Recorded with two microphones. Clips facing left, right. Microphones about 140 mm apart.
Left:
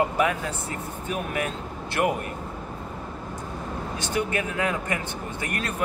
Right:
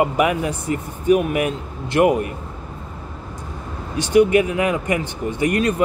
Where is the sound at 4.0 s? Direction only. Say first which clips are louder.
Right 14 dB; 15° right (ahead or behind).